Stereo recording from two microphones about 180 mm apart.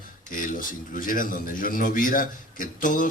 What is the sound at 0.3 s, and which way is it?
A man's voice, 50° left (ahead or behind).